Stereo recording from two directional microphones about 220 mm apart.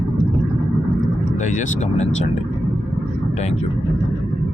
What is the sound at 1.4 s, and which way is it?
Speech, 35° left (ahead or behind).